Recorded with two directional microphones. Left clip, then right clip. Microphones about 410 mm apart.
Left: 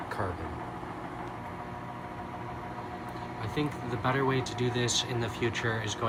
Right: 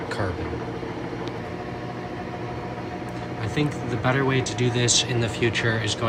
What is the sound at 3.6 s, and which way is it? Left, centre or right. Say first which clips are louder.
Speech: right 6 dB; centre.